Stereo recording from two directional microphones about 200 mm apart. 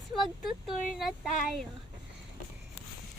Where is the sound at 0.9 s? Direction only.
Centre (ahead or behind).